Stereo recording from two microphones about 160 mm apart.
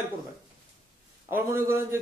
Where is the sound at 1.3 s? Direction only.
15° right (ahead or behind).